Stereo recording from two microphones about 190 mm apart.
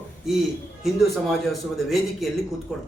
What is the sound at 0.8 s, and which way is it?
A man's voice, centre (ahead or behind).